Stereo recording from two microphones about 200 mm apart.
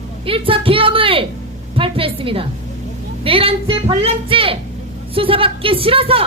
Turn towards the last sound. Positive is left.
turn(degrees=-30)  # may be behind; listen again after turning